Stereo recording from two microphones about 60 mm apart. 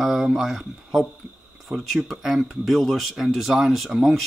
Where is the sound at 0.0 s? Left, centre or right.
Centre.